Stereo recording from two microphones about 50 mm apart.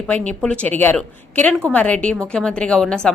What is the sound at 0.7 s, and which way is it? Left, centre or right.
Speech, left.